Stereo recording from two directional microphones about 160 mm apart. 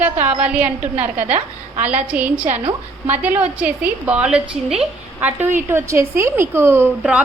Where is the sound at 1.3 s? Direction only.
40° right (ahead or behind).